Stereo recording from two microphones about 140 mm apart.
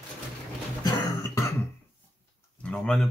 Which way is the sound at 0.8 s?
20° left (ahead or behind).